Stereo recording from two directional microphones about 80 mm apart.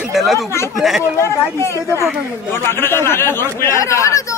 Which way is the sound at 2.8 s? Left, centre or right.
Left.